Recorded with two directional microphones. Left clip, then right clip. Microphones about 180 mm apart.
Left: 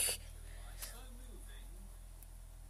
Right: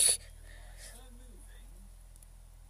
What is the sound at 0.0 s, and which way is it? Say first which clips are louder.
Whispering: right 8 dB; 25° right (ahead or behind).